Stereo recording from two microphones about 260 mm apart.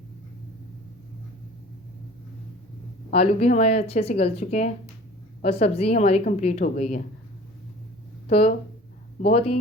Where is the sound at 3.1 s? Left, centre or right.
Left.